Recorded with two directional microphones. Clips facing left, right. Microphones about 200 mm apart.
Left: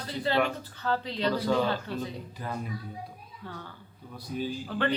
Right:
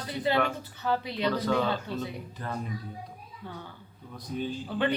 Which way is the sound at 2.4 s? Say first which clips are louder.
Even; 10° left (ahead or behind).